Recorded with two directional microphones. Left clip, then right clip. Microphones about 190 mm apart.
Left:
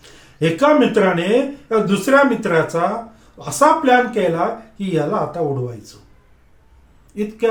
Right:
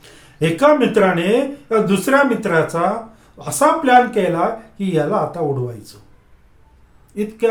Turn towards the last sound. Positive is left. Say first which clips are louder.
# right 1 dB
turn(degrees=-15)  # may be behind; listen again after turning